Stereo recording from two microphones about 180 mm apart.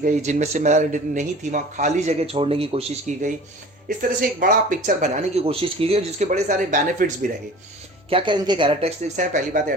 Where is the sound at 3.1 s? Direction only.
45° right (ahead or behind).